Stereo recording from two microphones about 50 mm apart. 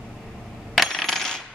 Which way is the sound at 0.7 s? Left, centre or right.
Centre.